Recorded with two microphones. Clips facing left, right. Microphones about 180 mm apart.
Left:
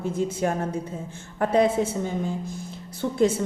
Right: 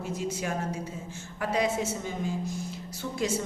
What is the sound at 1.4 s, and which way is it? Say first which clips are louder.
A woman's voice: left 7 dB; 55° left (ahead or behind).